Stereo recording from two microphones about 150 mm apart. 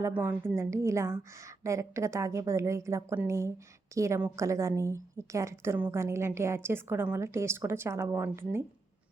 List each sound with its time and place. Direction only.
0.0 s a woman's voice: 10° right (ahead or behind)